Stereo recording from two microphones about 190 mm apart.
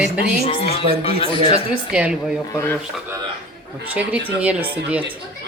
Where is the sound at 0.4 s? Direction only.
30° left (ahead or behind).